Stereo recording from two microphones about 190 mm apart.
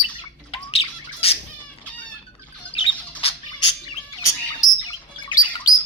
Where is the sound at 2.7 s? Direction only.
30° left (ahead or behind).